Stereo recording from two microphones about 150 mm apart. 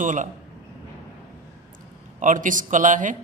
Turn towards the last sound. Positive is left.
turn(degrees=-60)  # may be behind; listen again after turning